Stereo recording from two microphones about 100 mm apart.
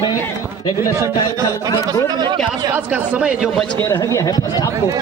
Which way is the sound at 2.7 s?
15° right (ahead or behind).